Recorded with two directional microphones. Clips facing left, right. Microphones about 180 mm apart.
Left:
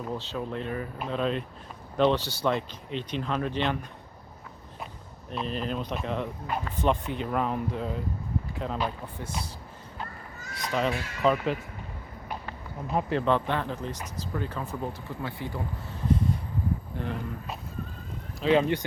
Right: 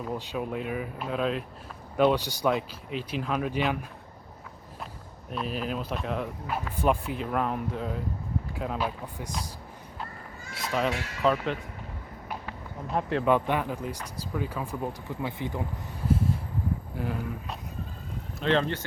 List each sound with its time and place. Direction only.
0.1 s speech: 10° right (ahead or behind)
5.3 s speech: 5° right (ahead or behind)
10.6 s speech: 5° right (ahead or behind)
12.3 s a sound: centre (ahead or behind)
13.2 s speech: 10° right (ahead or behind)
16.0 s a sound: 5° right (ahead or behind)
17.0 s speech: 5° right (ahead or behind)
18.3 s speech: 10° left (ahead or behind)